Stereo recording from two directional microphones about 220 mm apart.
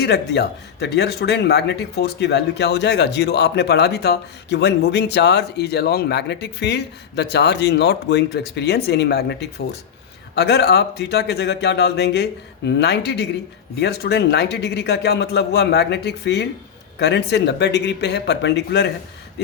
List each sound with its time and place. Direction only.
0.0 s speech: 50° left (ahead or behind)